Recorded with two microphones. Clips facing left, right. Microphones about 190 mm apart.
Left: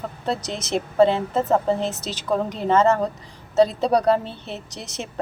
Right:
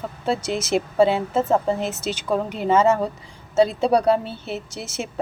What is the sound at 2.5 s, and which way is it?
A woman's voice, 5° right (ahead or behind).